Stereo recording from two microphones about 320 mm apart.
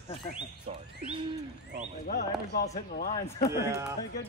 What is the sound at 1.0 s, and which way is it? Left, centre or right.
Bird, centre.